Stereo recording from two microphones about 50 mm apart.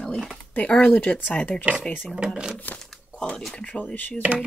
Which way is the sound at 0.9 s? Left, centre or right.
Left.